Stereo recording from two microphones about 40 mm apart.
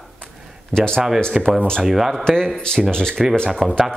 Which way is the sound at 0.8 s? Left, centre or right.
Centre.